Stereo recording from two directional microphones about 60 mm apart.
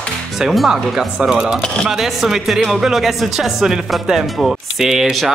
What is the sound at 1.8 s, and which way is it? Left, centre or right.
Speech, centre.